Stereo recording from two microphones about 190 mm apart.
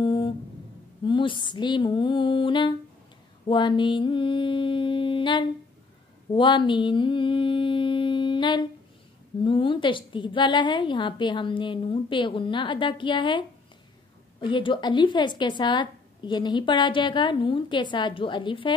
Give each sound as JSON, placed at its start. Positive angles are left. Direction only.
{"t": 0.0, "sound": "music", "side_deg": 25}
{"t": 1.0, "sound": "a woman's voice", "side_deg": 25}
{"t": 6.3, "sound": "mantra", "side_deg": 25}
{"t": 9.4, "sound": "a woman's voice", "side_deg": 25}